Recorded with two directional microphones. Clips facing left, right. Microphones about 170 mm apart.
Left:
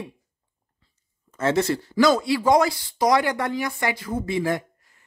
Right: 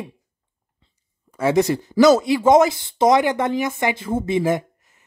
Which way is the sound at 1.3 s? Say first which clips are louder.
Right 4 dB; 15° right (ahead or behind).